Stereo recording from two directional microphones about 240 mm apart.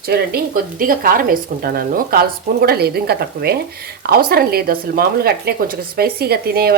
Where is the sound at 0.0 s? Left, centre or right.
Right.